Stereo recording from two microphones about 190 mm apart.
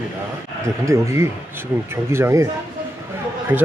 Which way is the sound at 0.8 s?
15° right (ahead or behind).